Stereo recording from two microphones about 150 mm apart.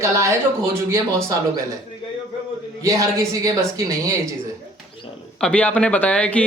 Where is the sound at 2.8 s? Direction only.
20° right (ahead or behind).